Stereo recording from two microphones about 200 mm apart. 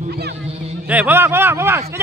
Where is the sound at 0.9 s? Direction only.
10° right (ahead or behind).